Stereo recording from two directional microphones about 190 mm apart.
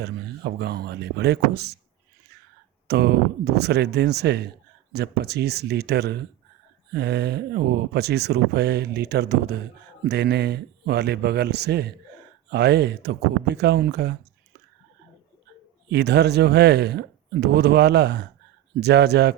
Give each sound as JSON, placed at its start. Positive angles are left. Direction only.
{"t": 0.0, "sound": "speech", "side_deg": -60}
{"t": 2.8, "sound": "speech", "side_deg": -60}
{"t": 15.9, "sound": "speech", "side_deg": -60}